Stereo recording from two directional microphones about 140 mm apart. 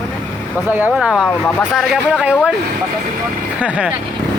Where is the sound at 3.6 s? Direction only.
10° right (ahead or behind).